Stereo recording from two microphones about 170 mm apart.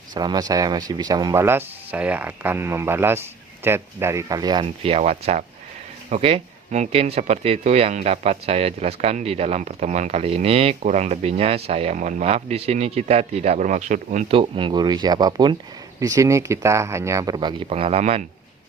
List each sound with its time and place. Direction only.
0.1 s speech: 25° right (ahead or behind); by 18.3 s 40° right (ahead or behind)